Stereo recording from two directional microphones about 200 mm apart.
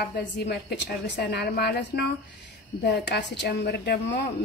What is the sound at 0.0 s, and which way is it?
A woman's voice, 55° left (ahead or behind).